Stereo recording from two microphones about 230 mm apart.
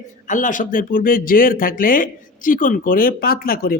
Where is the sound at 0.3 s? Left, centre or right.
Left.